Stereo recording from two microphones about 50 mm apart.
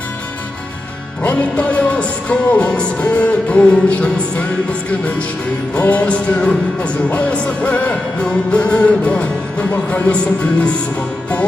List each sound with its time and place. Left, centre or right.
1.2 s music: left
5.7 s music: left